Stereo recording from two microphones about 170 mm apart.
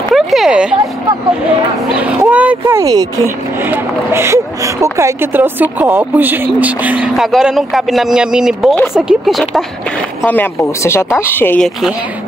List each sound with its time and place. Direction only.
0.1 s a sound: centre (ahead or behind)
2.0 s speech: 10° right (ahead or behind)
2.6 s speech: 20° right (ahead or behind); by 11.7 s 10° left (ahead or behind)